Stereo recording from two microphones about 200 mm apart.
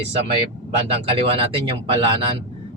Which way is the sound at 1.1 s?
30° right (ahead or behind).